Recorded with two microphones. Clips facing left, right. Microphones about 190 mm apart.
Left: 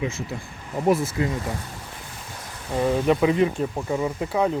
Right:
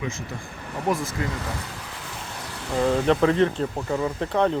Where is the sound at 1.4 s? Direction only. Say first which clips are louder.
Left 2 dB; 90° right.